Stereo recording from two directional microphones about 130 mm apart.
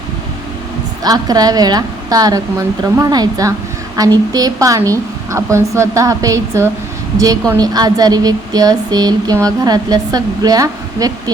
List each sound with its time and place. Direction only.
1.0 s a woman's voice: 30° right (ahead or behind)